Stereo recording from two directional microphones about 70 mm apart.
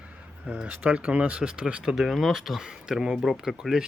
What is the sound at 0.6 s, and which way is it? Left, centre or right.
Speech, right.